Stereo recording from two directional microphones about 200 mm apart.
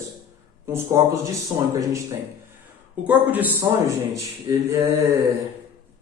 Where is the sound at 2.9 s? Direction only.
10° right (ahead or behind).